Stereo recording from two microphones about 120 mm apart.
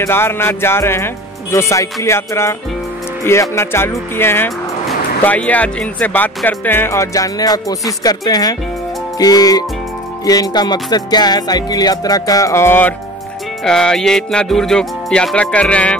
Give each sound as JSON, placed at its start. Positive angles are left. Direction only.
{"t": 0.0, "sound": "speech", "side_deg": 20}
{"t": 9.2, "sound": "music", "side_deg": 30}
{"t": 13.7, "sound": "speech", "side_deg": 5}